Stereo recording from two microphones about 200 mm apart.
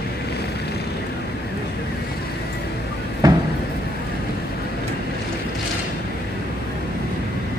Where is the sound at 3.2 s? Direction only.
20° right (ahead or behind).